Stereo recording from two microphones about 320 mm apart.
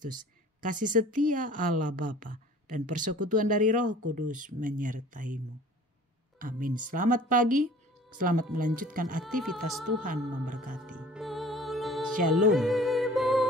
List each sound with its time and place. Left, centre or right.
0.7 s a woman's voice: right
6.4 s a woman's voice: right
9.2 s speech: centre
10.0 s a woman's voice: right
10.8 s music: centre